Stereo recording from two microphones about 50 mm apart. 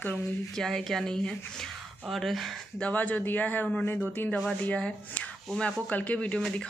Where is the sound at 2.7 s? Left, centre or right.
Left.